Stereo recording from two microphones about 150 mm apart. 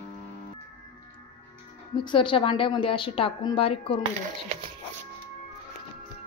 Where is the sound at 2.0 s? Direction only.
35° left (ahead or behind).